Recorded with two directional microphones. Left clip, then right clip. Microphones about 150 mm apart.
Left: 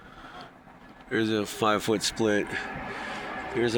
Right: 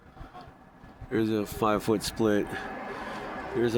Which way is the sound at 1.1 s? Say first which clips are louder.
Left 1 dB; 10° right (ahead or behind).